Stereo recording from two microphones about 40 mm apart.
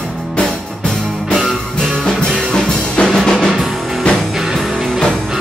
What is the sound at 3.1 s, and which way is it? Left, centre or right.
Music, centre.